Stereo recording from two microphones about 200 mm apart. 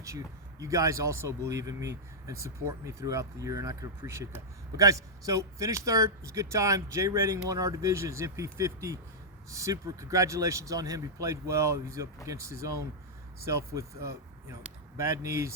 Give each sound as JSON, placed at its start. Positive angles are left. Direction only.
{"t": 0.6, "sound": "speech", "side_deg": -15}